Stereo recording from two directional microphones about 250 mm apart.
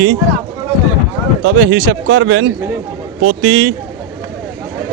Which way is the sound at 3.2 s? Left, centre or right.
Right.